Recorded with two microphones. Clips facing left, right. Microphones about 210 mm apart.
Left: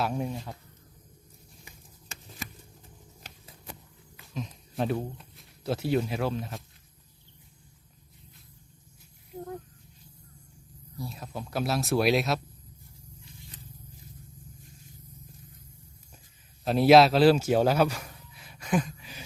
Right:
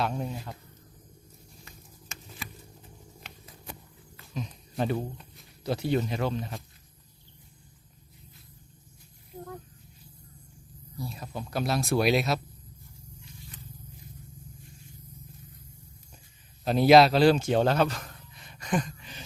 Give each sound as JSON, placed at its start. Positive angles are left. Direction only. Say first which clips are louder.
{"t": 0.0, "sound": "speech", "louder": "left 1 dB", "side_deg": 5}
{"t": 1.7, "sound": "a sound", "louder": "even", "side_deg": 15}
{"t": 2.1, "sound": "a sound", "louder": "even", "side_deg": 35}
{"t": 4.4, "sound": "speech", "louder": "even", "side_deg": 0}
{"t": 10.9, "sound": "speech", "louder": "right 1 dB", "side_deg": 0}
{"t": 16.6, "sound": "speech", "louder": "even", "side_deg": 0}